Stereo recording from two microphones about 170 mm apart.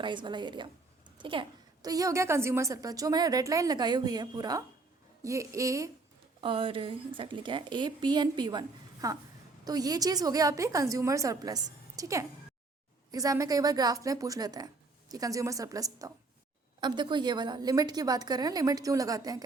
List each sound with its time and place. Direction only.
0.0 s a woman's voice: 30° right (ahead or behind)
6.4 s a woman's voice: 30° right (ahead or behind)